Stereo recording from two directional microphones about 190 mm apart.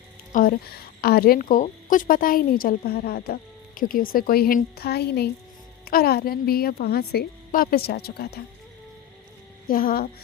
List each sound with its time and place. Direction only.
0.3 s a woman's voice: 50° left (ahead or behind)
9.6 s a woman's voice: 50° left (ahead or behind)